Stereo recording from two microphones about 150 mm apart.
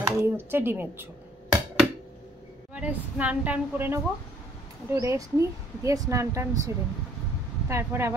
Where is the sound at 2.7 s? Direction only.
10° right (ahead or behind).